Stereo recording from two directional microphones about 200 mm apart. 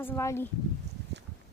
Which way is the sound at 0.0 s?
10° left (ahead or behind).